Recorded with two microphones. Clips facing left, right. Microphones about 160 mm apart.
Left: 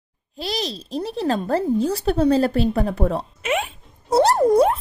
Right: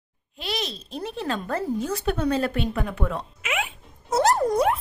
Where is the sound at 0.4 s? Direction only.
35° left (ahead or behind).